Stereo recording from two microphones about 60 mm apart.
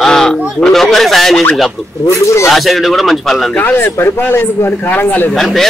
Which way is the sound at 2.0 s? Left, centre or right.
Left.